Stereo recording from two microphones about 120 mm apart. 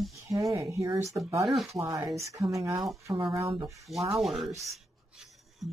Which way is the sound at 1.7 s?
25° right (ahead or behind).